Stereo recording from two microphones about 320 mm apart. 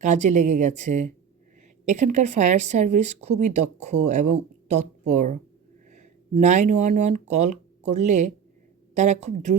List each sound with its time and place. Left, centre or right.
0.0 s a woman's voice: right